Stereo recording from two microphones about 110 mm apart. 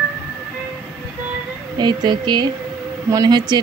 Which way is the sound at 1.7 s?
40° right (ahead or behind).